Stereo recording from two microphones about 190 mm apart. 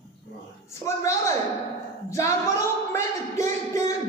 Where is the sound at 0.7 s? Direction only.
15° left (ahead or behind).